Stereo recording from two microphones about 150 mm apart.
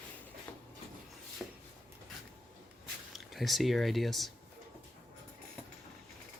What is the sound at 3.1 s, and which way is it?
Speech, centre (ahead or behind).